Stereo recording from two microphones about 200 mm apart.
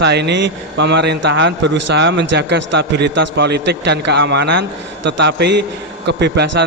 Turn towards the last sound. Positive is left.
turn(degrees=-60)  # may be behind; listen again after turning